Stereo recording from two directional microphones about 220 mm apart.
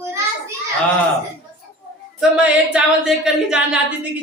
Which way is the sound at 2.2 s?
5° right (ahead or behind).